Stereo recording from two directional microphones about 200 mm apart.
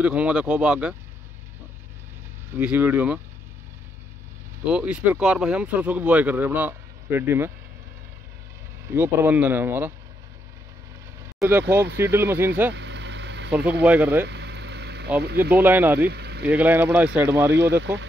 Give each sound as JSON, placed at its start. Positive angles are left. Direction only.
{"t": 0.0, "sound": "speech", "side_deg": -5}
{"t": 2.5, "sound": "speech", "side_deg": -10}
{"t": 4.6, "sound": "speech", "side_deg": -5}
{"t": 8.8, "sound": "speech", "side_deg": -10}
{"t": 11.3, "sound": "speech", "side_deg": -10}
{"t": 12.7, "sound": "vehicle", "side_deg": -60}
{"t": 13.8, "sound": "speech", "side_deg": -5}
{"t": 14.2, "sound": "vehicle", "side_deg": -60}
{"t": 15.5, "sound": "speech", "side_deg": -10}
{"t": 16.1, "sound": "vehicle", "side_deg": -55}
{"t": 16.4, "sound": "speech", "side_deg": -10}
{"t": 17.6, "sound": "speech", "side_deg": -60}